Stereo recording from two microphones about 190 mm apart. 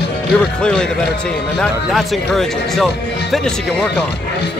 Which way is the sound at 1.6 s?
Centre (ahead or behind).